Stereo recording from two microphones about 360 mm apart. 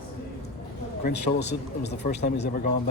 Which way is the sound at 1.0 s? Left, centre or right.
Left.